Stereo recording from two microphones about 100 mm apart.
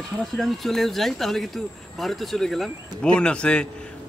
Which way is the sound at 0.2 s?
Centre (ahead or behind).